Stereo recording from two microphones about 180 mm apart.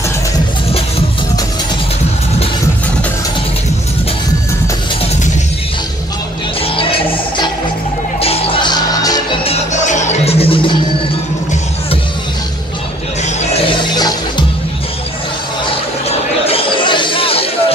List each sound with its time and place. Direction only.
6.6 s music: 30° left (ahead or behind)
9.5 s music: 40° left (ahead or behind)
13.2 s music: 35° left (ahead or behind)
16.4 s chatter: 30° left (ahead or behind)